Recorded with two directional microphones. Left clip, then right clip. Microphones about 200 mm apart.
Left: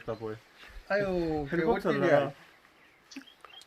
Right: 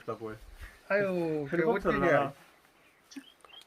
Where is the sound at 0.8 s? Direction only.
5° left (ahead or behind).